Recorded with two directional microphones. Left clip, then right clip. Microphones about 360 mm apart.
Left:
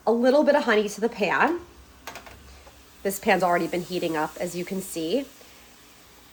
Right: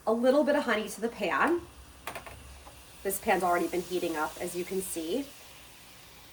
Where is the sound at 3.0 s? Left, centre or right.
Left.